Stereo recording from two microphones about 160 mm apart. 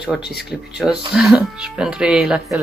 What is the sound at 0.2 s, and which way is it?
Speech, 90° left.